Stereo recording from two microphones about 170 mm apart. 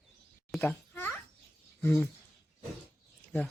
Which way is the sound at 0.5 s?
10° left (ahead or behind).